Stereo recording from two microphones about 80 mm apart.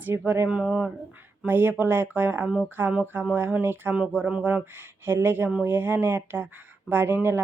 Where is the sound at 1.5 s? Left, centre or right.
Right.